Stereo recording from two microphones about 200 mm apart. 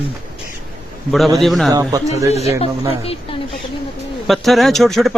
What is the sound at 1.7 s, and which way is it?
Speech, 20° right (ahead or behind).